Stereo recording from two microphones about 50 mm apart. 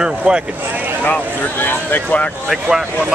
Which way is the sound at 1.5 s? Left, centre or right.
Left.